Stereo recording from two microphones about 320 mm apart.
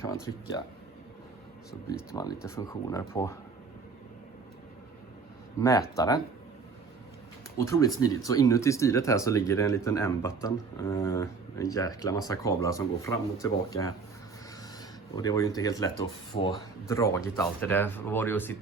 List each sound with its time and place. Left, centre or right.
0.3 s speech: left
1.9 s speech: centre
5.5 s speech: centre
7.6 s speech: centre
15.1 s speech: centre
16.9 s speech: centre